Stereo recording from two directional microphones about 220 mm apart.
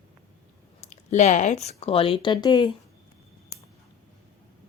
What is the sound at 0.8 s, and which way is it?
Speech, 30° left (ahead or behind).